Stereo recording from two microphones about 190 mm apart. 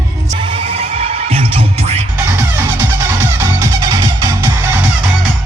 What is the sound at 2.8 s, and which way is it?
Music, 15° right (ahead or behind).